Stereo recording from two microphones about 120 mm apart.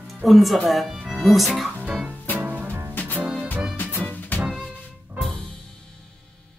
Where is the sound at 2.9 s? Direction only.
15° left (ahead or behind).